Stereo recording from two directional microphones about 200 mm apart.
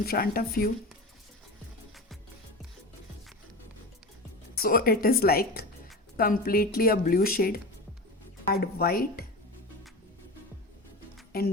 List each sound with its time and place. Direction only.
0.0 s speech: 50° left (ahead or behind)
4.5 s speech: 45° left (ahead or behind)
8.6 s speech: 50° left (ahead or behind)
11.3 s speech: 50° left (ahead or behind)